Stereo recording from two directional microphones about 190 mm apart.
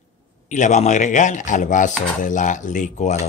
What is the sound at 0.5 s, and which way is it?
Speech, 40° left (ahead or behind).